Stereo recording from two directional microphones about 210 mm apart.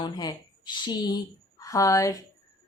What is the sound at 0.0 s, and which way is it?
Speech, 20° left (ahead or behind).